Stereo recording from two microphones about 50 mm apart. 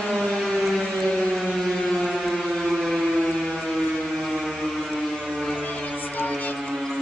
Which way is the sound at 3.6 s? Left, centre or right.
Centre.